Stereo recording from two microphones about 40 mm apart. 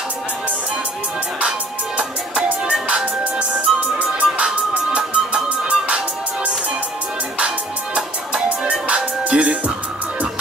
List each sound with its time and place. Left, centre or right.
2.0 s music: right